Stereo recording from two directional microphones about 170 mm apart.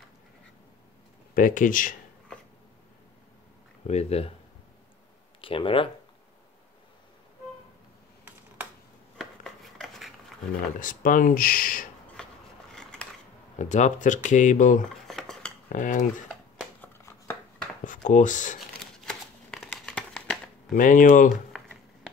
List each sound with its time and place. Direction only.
1.3 s speech: 50° left (ahead or behind)
3.8 s speech: 40° left (ahead or behind)
5.4 s speech: 30° left (ahead or behind)
9.2 s a sound: centre (ahead or behind)
10.8 s speech: 55° left (ahead or behind)
12.2 s a sound: 5° left (ahead or behind)
12.7 s scissors: 5° left (ahead or behind)
13.6 s speech: 45° left (ahead or behind)
15.0 s a sound: 5° left (ahead or behind)
15.7 s speech: 50° left (ahead or behind)
16.8 s a sound: 15° left (ahead or behind)
17.8 s speech: 50° left (ahead or behind)
18.8 s crumpling: 5° left (ahead or behind)
20.7 s speech: 50° left (ahead or behind)